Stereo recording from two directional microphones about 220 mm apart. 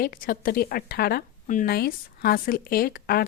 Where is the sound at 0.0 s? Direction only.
40° left (ahead or behind).